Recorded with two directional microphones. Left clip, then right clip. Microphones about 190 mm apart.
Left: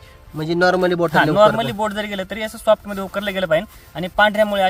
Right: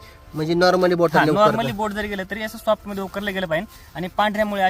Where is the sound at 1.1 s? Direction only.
40° left (ahead or behind).